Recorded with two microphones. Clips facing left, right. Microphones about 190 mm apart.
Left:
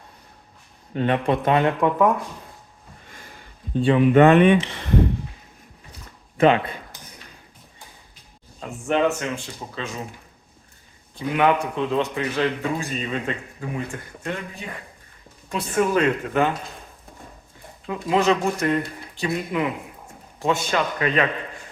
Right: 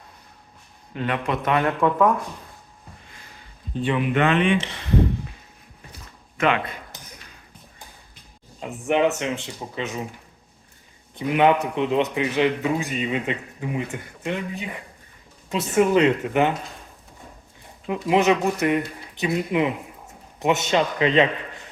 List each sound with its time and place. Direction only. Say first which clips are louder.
0.9 s speech: left 4 dB; 35° left (ahead or behind)
3.8 s speech: left 7 dB; 35° left (ahead or behind)
6.3 s speech: left 5 dB; 35° left (ahead or behind)
8.9 s speech: right 1 dB; 20° right (ahead or behind)
11.1 s a man's voice: right 2 dB; 20° right (ahead or behind)
17.8 s speech: right 1 dB; 20° right (ahead or behind)